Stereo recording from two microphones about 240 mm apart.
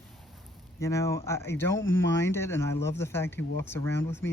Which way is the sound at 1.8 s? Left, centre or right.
Left.